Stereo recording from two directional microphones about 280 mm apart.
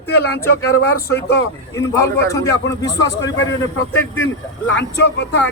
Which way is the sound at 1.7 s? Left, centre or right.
Centre.